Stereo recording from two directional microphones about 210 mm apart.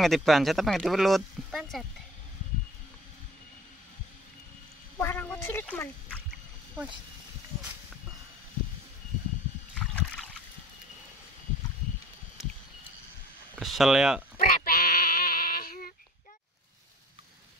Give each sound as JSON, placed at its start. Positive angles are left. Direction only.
{"t": 0.0, "sound": "speech", "side_deg": 0}
{"t": 4.9, "sound": "quack", "side_deg": 10}
{"t": 9.8, "sound": "a sound", "side_deg": 5}
{"t": 13.6, "sound": "speech", "side_deg": 0}
{"t": 14.5, "sound": "bleat", "side_deg": 45}